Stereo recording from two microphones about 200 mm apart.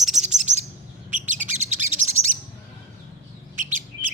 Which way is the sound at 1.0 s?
40° right (ahead or behind).